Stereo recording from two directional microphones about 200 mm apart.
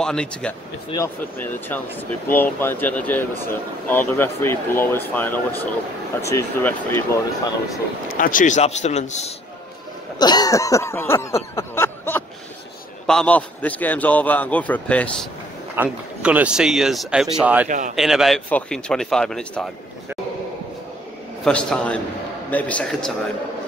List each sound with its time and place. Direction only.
0.0 s speech: 5° left (ahead or behind)
0.8 s speech: 15° left (ahead or behind)
8.1 s a man's voice: 45° left (ahead or behind)
10.1 s a sound: 20° left (ahead or behind)
13.0 s speech: 5° left (ahead or behind)
15.7 s speech: 5° right (ahead or behind)
17.6 s speech: 40° right (ahead or behind)
17.9 s speech: centre (ahead or behind)
21.5 s speech: 5° left (ahead or behind)